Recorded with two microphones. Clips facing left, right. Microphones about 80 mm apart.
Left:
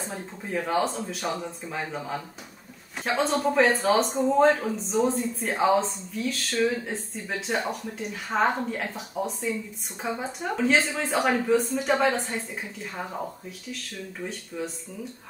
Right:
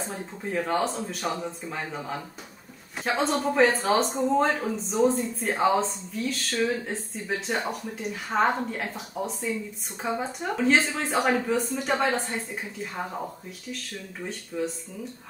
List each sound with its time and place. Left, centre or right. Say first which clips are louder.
0.1 s speech: right 1 dB; centre
14.5 s speech: right 4 dB; centre